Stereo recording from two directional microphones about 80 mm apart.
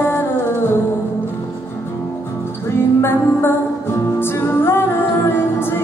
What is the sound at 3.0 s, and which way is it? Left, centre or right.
Music, left.